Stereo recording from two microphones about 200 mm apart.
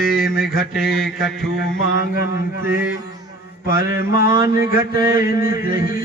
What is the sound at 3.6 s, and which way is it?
Speech, 45° left (ahead or behind).